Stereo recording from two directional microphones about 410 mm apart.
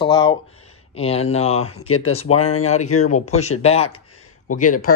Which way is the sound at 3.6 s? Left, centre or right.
Centre.